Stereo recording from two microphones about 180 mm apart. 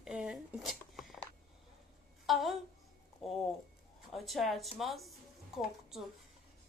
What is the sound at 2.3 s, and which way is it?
A woman's voice, centre (ahead or behind).